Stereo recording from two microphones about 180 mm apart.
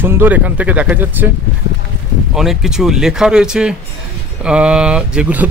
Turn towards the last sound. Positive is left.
turn(degrees=-5)  # may be behind; listen again after turning